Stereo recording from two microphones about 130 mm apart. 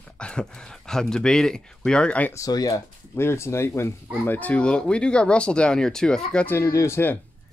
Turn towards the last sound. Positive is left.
turn(degrees=15)  # may be behind; listen again after turning